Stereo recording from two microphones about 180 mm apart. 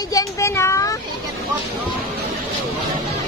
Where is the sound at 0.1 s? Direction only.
15° left (ahead or behind).